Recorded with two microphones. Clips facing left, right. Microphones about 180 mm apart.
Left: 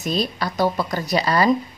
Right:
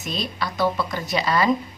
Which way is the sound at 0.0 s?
40° left (ahead or behind).